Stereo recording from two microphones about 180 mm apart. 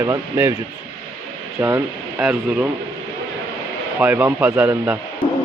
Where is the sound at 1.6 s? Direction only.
15° right (ahead or behind).